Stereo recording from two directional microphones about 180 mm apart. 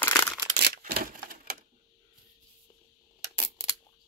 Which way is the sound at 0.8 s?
60° right (ahead or behind).